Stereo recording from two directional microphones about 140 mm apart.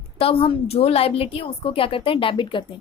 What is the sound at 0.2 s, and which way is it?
A woman's voice, 45° left (ahead or behind).